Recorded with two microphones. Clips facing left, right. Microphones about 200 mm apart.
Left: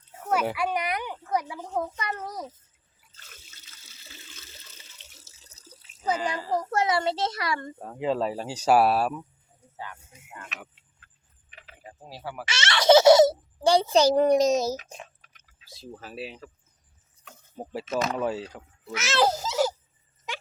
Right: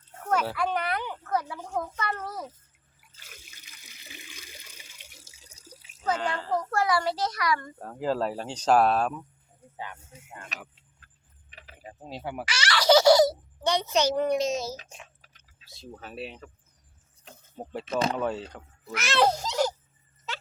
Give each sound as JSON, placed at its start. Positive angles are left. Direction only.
{"t": 0.1, "sound": "a sound", "side_deg": 10}
{"t": 2.0, "sound": "a child's voice", "side_deg": 15}
{"t": 3.2, "sound": "water", "side_deg": -10}
{"t": 6.0, "sound": "a child's voice", "side_deg": 5}
{"t": 6.3, "sound": "a child's voice", "side_deg": 15}
{"t": 7.8, "sound": "speech", "side_deg": 0}
{"t": 9.7, "sound": "speech", "side_deg": -20}
{"t": 10.3, "sound": "speech", "side_deg": -35}
{"t": 11.9, "sound": "speech", "side_deg": -20}
{"t": 12.5, "sound": "a child's voice", "side_deg": 25}
{"t": 15.7, "sound": "speech", "side_deg": 0}
{"t": 17.6, "sound": "speech", "side_deg": 5}